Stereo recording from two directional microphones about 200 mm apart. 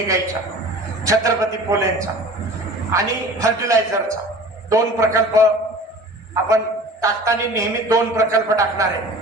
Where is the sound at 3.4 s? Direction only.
15° right (ahead or behind).